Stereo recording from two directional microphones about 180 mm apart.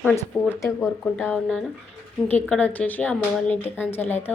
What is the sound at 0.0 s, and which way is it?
Speech, 10° left (ahead or behind).